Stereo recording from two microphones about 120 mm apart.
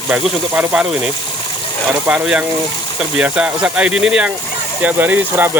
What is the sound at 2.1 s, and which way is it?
Speech, 10° right (ahead or behind).